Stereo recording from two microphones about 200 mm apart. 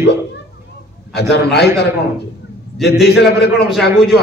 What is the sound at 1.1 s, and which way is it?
Speech, 55° left (ahead or behind).